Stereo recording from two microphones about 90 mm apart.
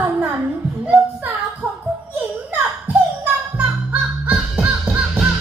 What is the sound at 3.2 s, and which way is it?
Music, 15° right (ahead or behind).